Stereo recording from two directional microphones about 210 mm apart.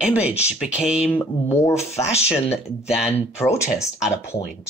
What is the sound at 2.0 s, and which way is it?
Speech, 30° left (ahead or behind).